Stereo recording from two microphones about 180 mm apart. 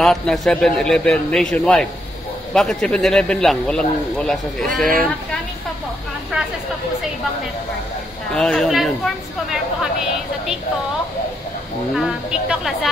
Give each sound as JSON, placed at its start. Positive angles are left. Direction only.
{"t": 0.0, "sound": "a man's voice", "side_deg": 0}
{"t": 8.3, "sound": "a man's voice", "side_deg": 5}
{"t": 11.9, "sound": "a man's voice", "side_deg": 0}